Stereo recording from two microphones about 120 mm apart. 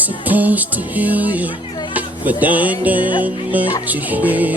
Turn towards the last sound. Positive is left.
turn(degrees=-15)  # may be behind; listen again after turning